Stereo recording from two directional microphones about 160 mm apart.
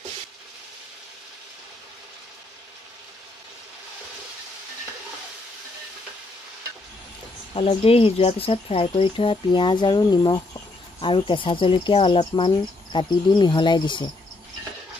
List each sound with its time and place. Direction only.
7.5 s speech: 35° left (ahead or behind)